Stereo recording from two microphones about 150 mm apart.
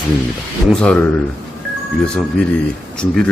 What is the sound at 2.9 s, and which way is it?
Speech, 5° left (ahead or behind).